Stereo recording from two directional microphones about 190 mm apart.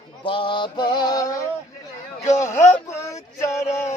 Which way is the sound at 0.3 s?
25° left (ahead or behind).